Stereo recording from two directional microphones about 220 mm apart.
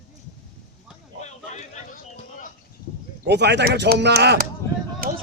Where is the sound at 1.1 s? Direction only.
30° left (ahead or behind).